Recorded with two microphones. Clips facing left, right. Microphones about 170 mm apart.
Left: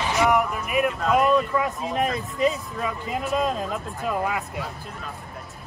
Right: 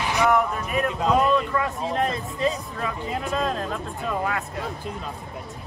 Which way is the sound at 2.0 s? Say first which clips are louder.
Left 3 dB; 20° left (ahead or behind).